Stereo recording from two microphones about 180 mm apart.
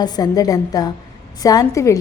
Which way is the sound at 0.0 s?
20° left (ahead or behind).